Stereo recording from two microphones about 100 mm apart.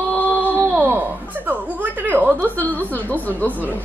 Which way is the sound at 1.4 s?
20° right (ahead or behind).